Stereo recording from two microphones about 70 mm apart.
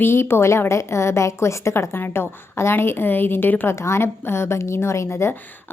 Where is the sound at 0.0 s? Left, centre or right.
Left.